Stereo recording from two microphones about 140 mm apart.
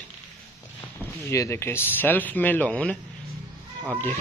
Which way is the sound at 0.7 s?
20° left (ahead or behind).